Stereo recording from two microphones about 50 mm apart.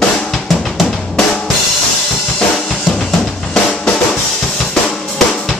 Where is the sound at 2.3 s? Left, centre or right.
Centre.